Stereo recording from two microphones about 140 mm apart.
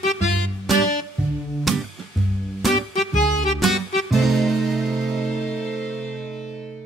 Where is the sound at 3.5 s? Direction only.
Centre (ahead or behind).